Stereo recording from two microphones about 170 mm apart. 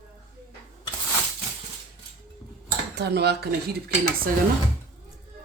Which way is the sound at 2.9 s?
80° right.